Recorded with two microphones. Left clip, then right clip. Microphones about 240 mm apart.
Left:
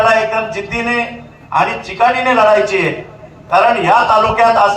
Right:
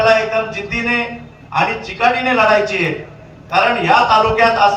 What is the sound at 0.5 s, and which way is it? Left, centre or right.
A man's voice, centre.